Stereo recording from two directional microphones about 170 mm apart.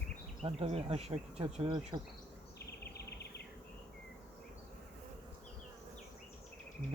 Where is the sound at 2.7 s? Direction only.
75° left (ahead or behind).